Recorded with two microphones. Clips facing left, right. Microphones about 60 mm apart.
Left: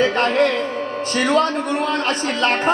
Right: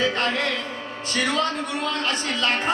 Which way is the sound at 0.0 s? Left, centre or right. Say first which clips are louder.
Left 7 dB; left.